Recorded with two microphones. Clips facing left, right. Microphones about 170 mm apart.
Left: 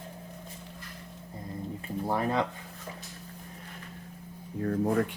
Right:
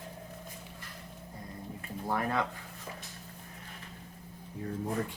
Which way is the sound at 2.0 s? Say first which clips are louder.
Left 3 dB; 25° left (ahead or behind).